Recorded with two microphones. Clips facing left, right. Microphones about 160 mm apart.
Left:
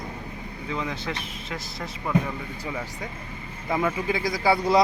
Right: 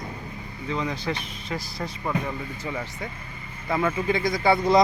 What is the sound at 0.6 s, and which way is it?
Speech, centre (ahead or behind).